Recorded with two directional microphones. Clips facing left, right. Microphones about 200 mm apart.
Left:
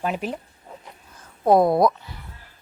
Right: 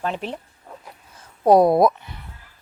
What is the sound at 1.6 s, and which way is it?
Speech, 25° right (ahead or behind).